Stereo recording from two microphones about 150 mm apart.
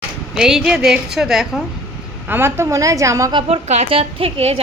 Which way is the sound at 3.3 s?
45° right (ahead or behind).